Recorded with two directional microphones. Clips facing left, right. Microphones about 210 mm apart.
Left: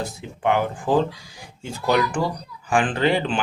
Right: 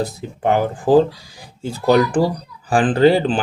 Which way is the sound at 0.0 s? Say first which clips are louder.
Right 4 dB; 35° right (ahead or behind).